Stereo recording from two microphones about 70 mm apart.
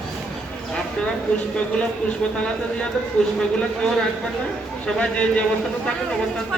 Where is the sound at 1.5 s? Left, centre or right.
Centre.